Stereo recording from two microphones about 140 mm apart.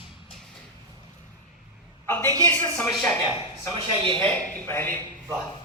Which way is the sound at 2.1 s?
15° left (ahead or behind).